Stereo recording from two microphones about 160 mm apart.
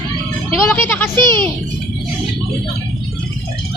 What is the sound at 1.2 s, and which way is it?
Speech, 30° right (ahead or behind).